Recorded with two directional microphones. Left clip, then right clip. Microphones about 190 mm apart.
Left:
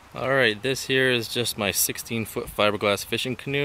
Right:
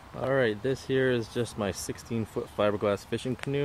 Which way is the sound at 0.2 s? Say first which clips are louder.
Left 5 dB; 15° left (ahead or behind).